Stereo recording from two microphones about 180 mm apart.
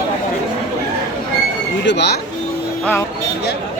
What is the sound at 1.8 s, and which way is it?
Speech, 70° left (ahead or behind).